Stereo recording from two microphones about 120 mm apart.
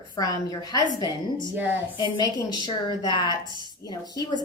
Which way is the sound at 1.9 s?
40° left (ahead or behind).